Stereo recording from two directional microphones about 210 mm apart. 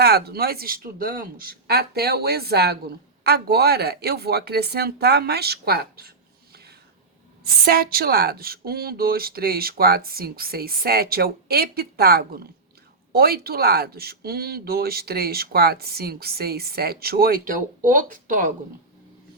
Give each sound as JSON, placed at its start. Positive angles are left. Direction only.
{"t": 0.0, "sound": "speech", "side_deg": -50}